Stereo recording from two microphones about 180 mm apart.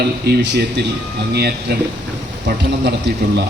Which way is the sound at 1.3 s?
65° right (ahead or behind).